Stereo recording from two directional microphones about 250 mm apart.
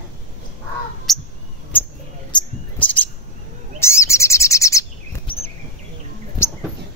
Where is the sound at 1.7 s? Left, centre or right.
Centre.